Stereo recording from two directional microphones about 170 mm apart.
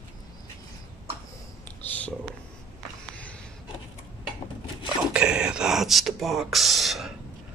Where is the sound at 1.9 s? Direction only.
10° left (ahead or behind).